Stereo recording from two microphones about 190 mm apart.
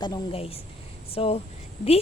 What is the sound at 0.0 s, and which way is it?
Speech, 25° left (ahead or behind).